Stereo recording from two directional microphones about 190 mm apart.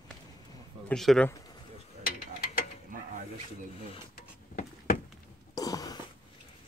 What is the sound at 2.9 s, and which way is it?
Mechanisms, 45° right (ahead or behind).